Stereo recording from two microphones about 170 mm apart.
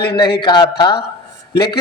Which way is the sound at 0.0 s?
70° left (ahead or behind).